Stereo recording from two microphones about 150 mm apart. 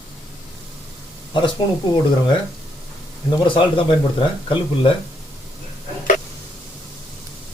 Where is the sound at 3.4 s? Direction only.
35° left (ahead or behind).